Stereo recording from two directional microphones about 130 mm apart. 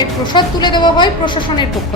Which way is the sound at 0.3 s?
35° left (ahead or behind).